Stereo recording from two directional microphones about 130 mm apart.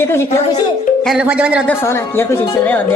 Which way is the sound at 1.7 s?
20° left (ahead or behind).